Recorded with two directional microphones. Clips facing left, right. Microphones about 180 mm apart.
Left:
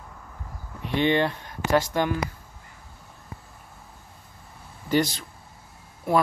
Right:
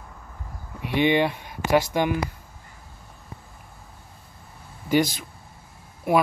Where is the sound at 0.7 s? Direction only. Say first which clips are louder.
Right 2 dB; 15° right (ahead or behind).